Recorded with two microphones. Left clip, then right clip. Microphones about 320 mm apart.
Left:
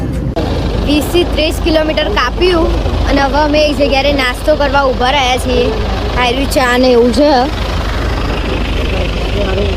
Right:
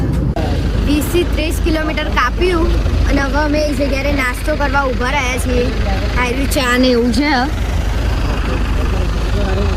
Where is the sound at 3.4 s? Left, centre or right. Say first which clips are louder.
Left 6 dB; centre.